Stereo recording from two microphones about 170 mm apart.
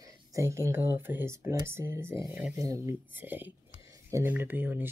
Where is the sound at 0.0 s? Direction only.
20° right (ahead or behind).